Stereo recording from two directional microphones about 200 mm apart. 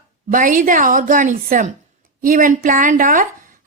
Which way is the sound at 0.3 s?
45° right (ahead or behind).